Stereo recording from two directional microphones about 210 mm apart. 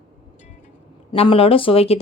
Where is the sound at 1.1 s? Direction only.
25° left (ahead or behind).